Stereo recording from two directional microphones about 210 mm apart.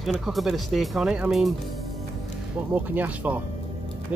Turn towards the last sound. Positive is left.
turn(degrees=-10)  # may be behind; listen again after turning